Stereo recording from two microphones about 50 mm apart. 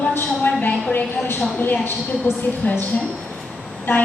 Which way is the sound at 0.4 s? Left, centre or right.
Left.